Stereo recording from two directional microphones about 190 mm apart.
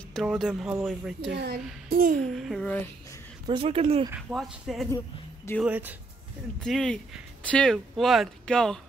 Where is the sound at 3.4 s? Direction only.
25° right (ahead or behind).